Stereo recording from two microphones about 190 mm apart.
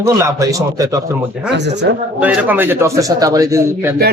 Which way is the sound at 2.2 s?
10° right (ahead or behind).